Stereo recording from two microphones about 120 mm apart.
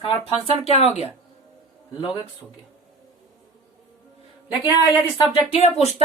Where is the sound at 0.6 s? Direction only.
60° left (ahead or behind).